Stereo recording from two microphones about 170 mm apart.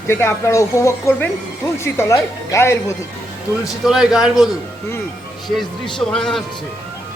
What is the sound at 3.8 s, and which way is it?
Speech, 5° right (ahead or behind).